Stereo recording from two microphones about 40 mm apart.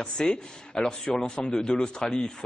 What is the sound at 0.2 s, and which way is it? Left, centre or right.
A man's voice, centre.